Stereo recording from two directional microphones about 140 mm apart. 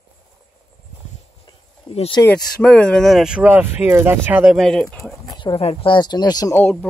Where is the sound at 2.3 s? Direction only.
10° left (ahead or behind).